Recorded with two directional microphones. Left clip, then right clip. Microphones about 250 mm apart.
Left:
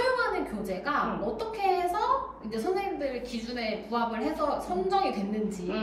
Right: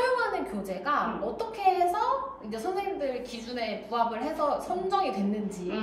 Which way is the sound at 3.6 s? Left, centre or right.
Centre.